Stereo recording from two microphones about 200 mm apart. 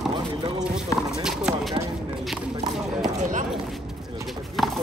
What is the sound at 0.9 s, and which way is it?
Clip-clop, 15° left (ahead or behind).